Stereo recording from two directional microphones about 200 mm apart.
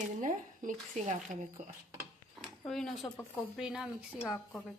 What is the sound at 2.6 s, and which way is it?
Speech, centre (ahead or behind).